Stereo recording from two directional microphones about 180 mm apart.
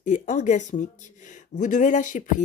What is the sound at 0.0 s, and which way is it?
Speech, 45° left (ahead or behind).